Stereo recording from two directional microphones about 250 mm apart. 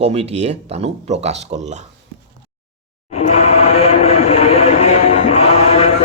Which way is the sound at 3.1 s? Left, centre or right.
Left.